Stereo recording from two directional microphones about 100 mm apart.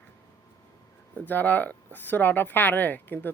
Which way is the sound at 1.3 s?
20° left (ahead or behind).